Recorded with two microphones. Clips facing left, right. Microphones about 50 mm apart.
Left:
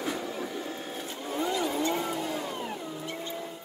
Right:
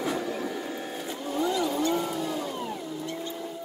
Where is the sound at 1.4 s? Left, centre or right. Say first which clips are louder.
Right 2 dB; left.